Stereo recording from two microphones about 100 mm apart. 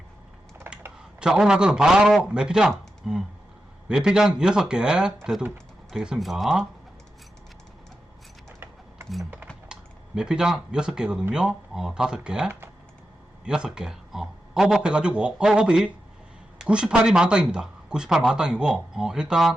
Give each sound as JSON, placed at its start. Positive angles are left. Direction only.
{"t": 0.7, "sound": "typing", "side_deg": -20}
{"t": 1.2, "sound": "speech", "side_deg": -5}
{"t": 10.2, "sound": "speech", "side_deg": -5}